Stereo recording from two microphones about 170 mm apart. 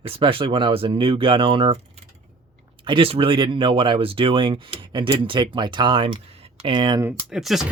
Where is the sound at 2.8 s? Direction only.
30° right (ahead or behind).